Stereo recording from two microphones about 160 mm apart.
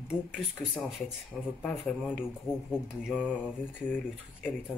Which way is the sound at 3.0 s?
5° right (ahead or behind).